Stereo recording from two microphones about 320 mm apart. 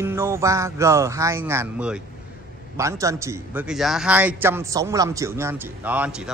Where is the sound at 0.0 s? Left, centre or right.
Centre.